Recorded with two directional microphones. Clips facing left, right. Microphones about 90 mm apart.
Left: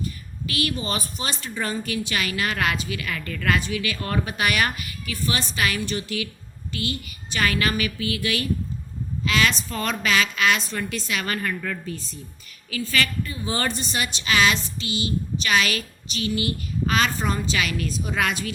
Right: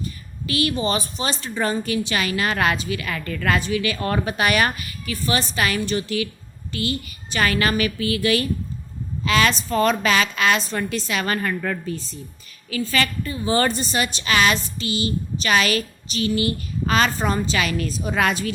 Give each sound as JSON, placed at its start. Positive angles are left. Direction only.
{"t": 0.4, "sound": "a woman's voice", "side_deg": -30}